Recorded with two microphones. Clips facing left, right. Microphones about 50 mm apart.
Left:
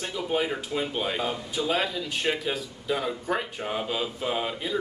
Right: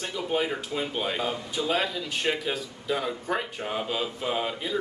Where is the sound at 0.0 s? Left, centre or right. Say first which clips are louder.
Even; centre.